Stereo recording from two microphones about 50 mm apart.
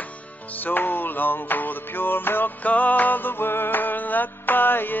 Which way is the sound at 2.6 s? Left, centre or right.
Left.